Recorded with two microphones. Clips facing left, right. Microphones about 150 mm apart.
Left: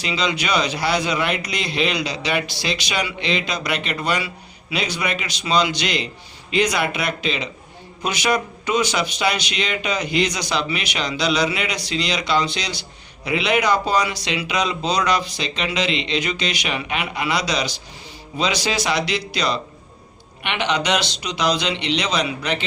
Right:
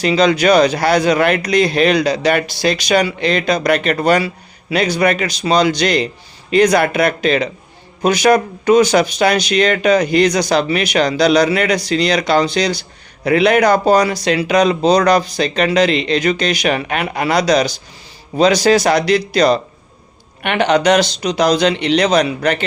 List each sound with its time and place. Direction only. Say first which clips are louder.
0.0 s speech: right 11 dB; 45° right (ahead or behind)